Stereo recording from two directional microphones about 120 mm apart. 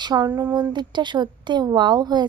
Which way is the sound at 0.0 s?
35° right (ahead or behind).